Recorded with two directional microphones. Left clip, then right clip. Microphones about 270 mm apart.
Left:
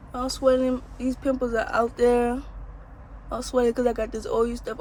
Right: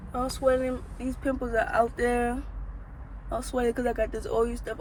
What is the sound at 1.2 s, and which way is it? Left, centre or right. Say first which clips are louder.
Speech: left 2 dB; centre.